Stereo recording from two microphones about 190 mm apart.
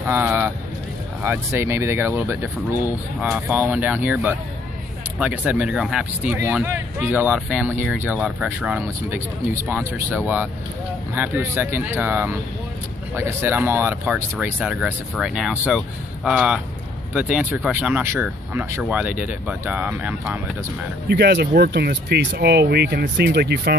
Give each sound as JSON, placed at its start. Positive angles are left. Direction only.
{"t": 0.0, "sound": "speech", "side_deg": -10}
{"t": 21.1, "sound": "speech", "side_deg": -60}